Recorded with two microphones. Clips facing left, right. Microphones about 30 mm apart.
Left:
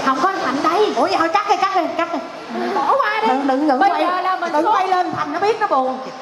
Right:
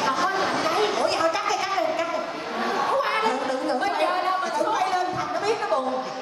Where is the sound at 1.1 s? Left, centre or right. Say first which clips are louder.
Left 7 dB; centre.